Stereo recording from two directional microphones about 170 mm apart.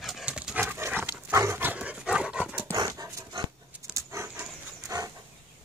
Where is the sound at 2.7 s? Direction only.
20° right (ahead or behind).